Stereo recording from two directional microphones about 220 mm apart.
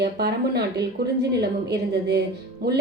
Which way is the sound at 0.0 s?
45° right (ahead or behind).